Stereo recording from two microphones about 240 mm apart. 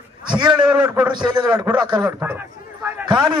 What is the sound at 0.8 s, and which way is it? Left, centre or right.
Speech, centre.